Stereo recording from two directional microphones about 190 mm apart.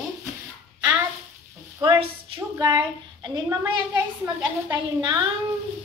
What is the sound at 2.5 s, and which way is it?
A woman's voice, 20° right (ahead or behind).